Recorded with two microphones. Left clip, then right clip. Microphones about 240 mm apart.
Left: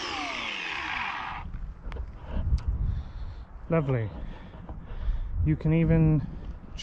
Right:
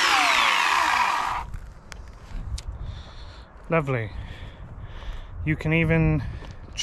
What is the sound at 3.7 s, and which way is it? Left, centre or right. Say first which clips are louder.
Speech: right 4 dB; centre.